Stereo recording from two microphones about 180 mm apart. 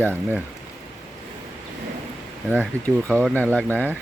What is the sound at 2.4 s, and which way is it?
Speech, 10° right (ahead or behind).